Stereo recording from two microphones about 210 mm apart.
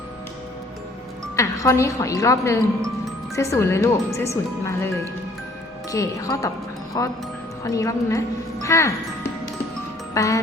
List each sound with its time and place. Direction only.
1.4 s speech: 15° left (ahead or behind)
5.9 s speech: 15° left (ahead or behind)
10.2 s speech: 15° left (ahead or behind)